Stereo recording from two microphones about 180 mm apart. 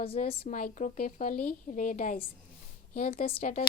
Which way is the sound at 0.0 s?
30° left (ahead or behind).